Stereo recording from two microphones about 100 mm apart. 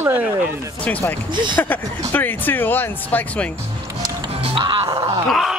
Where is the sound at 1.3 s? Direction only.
50° right (ahead or behind).